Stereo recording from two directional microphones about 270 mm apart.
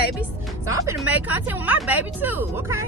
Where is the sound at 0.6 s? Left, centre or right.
Centre.